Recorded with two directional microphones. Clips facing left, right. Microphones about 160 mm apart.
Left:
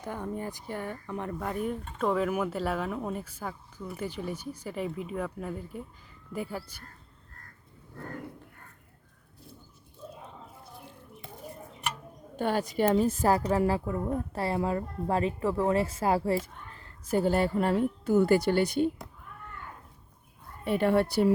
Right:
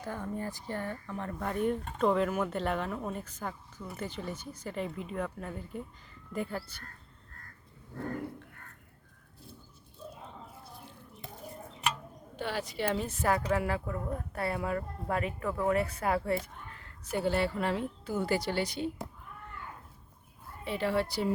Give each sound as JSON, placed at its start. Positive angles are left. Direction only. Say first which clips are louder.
{"t": 0.0, "sound": "speech", "louder": "left 2 dB", "side_deg": 15}
{"t": 1.4, "sound": "speech", "louder": "right 4 dB", "side_deg": 5}
{"t": 12.4, "sound": "a woman's voice", "louder": "left 7 dB", "side_deg": 50}
{"t": 17.1, "sound": "speech", "louder": "left 4 dB", "side_deg": 45}
{"t": 20.7, "sound": "speech", "louder": "left 6 dB", "side_deg": 55}